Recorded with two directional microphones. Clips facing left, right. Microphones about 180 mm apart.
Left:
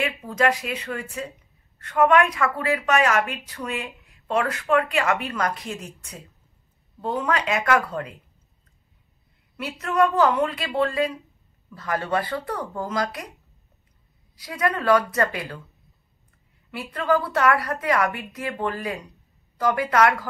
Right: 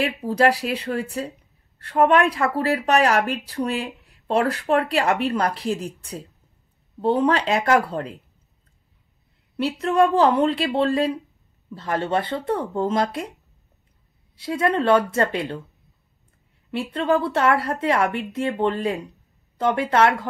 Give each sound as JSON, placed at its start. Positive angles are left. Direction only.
{"t": 0.0, "sound": "speech", "side_deg": -35}
{"t": 9.6, "sound": "a woman's voice", "side_deg": -30}
{"t": 14.3, "sound": "a woman's voice", "side_deg": -25}
{"t": 16.7, "sound": "a woman's voice", "side_deg": -25}